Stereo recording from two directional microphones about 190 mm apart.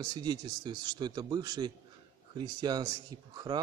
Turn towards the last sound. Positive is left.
turn(degrees=-20)  # may be behind; listen again after turning